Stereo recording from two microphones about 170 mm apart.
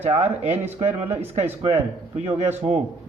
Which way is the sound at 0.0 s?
40° right (ahead or behind).